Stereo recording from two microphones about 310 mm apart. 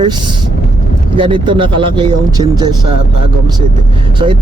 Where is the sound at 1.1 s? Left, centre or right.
Centre.